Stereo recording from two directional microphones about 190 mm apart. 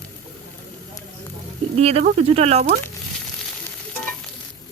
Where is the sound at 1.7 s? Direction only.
35° right (ahead or behind).